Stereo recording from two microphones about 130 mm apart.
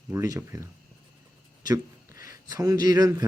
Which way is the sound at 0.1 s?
20° right (ahead or behind).